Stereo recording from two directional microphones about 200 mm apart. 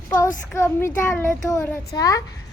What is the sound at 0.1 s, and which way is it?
A child's voice, 15° left (ahead or behind).